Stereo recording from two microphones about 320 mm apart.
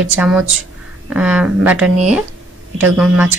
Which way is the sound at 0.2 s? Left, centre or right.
Centre.